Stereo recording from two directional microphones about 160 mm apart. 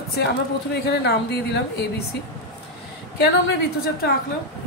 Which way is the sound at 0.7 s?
90° left.